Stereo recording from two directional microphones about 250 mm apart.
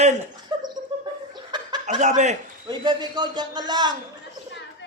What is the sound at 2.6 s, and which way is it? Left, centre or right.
A man's voice, centre.